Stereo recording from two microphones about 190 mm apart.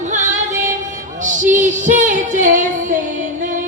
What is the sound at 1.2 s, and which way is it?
Singing, 40° right (ahead or behind).